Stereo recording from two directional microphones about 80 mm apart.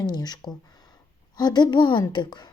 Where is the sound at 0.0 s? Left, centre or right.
Left.